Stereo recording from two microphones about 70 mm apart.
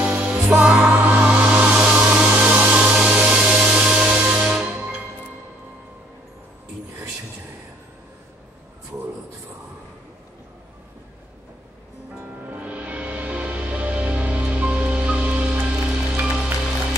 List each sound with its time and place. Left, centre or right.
0.0 s music: centre
1.5 s hair dryer: right
12.4 s music: right